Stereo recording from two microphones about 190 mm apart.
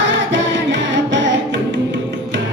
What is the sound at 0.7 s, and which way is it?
Carnatic music, 75° right (ahead or behind).